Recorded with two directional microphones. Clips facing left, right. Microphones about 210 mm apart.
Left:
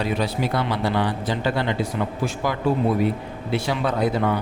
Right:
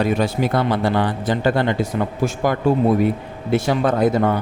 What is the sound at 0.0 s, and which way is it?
A man's voice, 50° right (ahead or behind).